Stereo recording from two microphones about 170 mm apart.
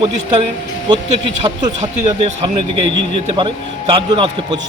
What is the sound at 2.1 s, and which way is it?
A man's voice, 35° right (ahead or behind).